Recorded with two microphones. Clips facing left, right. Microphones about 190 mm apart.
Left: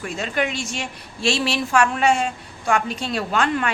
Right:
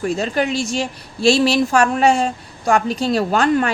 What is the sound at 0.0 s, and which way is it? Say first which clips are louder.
A woman's voice: right 5 dB; 35° right (ahead or behind).